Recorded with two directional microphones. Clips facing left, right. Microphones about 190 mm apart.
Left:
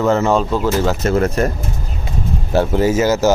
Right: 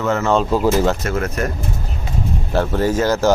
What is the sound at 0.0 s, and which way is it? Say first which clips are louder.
Speech: left 3 dB; 30° left (ahead or behind).